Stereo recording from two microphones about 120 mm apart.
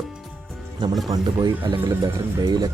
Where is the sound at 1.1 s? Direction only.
40° right (ahead or behind).